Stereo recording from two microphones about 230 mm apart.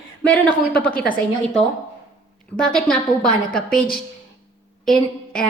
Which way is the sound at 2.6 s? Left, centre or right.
Centre.